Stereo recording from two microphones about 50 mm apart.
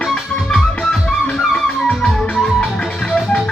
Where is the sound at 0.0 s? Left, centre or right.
Centre.